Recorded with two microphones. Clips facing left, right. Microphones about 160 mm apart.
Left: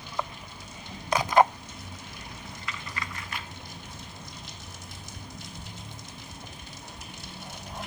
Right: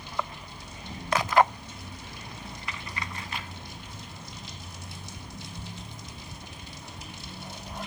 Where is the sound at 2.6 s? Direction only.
30° right (ahead or behind).